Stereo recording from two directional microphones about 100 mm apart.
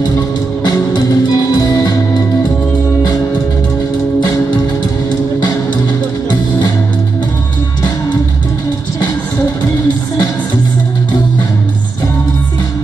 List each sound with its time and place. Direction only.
0.9 s music: 40° left (ahead or behind)